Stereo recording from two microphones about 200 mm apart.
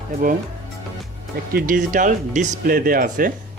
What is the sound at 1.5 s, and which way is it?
Speech, 45° right (ahead or behind).